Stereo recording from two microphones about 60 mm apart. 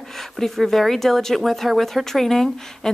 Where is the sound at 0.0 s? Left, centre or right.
Centre.